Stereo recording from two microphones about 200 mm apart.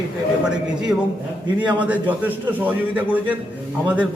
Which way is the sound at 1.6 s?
5° right (ahead or behind).